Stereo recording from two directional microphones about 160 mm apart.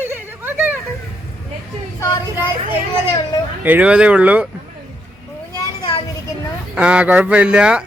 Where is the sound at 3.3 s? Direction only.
25° left (ahead or behind).